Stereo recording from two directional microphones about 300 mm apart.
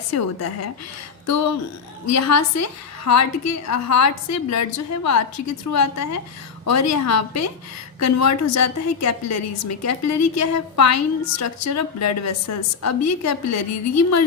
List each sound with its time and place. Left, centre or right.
0.1 s a woman's voice: left
2.0 s a woman's voice: left